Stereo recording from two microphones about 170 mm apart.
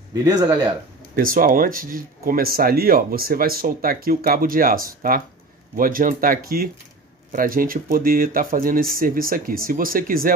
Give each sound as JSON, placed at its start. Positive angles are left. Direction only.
{"t": 0.1, "sound": "speech", "side_deg": -20}
{"t": 1.1, "sound": "speech", "side_deg": -55}